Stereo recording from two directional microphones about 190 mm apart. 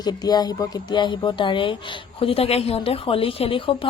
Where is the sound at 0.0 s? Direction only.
20° left (ahead or behind).